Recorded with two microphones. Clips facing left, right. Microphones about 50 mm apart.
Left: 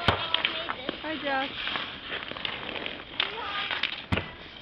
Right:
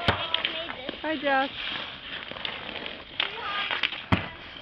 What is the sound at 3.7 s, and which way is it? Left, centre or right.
Basketball bounce, right.